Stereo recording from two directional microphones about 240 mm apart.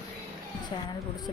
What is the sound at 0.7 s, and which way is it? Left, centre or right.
Speech, left.